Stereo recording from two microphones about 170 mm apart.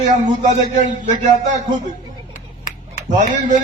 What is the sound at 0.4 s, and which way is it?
A man's voice, 45° right (ahead or behind).